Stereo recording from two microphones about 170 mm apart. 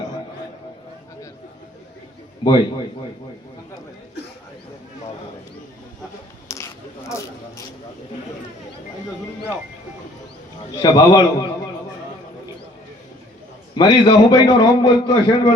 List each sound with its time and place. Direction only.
2.4 s a man's voice: 30° left (ahead or behind)
6.5 s a sound: 15° left (ahead or behind)
10.9 s a man's voice: 25° left (ahead or behind)
13.7 s a man's voice: 25° left (ahead or behind)